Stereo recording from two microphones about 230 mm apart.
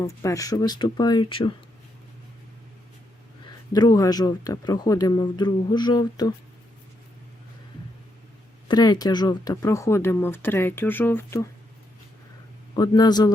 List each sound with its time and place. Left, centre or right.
0.0 s speech: centre
3.4 s speech: centre
8.6 s speech: centre
12.7 s speech: centre